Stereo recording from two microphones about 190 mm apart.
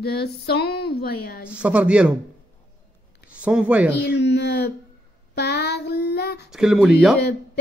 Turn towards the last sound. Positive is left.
turn(degrees=0)  # may be behind; listen again after turning